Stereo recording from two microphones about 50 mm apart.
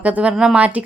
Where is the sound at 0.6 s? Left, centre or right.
Right.